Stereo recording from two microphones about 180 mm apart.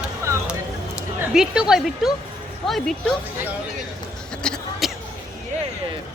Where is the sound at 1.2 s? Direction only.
5° right (ahead or behind).